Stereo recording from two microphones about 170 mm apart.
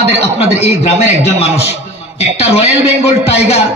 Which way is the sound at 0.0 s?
40° left (ahead or behind).